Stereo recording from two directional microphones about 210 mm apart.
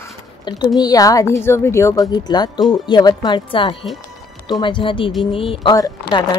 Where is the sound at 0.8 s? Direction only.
15° left (ahead or behind).